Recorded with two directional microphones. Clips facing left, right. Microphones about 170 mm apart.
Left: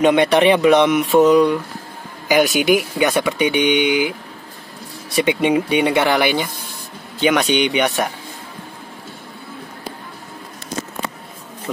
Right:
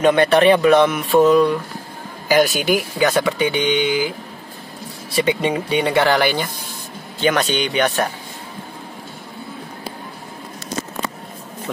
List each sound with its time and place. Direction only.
0.0 s speech: 15° left (ahead or behind)
5.1 s speech: 15° left (ahead or behind)